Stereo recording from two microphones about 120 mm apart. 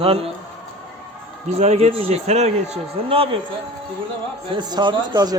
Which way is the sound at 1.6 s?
65° right (ahead or behind).